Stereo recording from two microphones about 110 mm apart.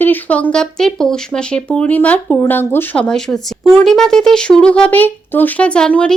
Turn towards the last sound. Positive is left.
turn(degrees=10)  # may be behind; listen again after turning